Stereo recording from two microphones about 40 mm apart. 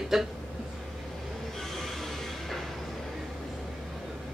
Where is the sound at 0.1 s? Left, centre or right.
Centre.